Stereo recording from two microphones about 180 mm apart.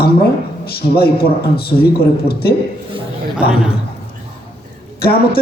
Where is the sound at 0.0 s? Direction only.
60° left (ahead or behind).